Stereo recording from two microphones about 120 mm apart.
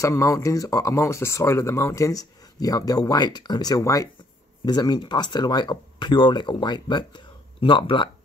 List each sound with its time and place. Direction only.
0.0 s speech: 25° left (ahead or behind); by 8.1 s 45° left (ahead or behind)